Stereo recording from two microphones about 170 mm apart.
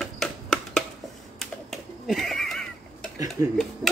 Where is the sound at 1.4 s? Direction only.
Centre (ahead or behind).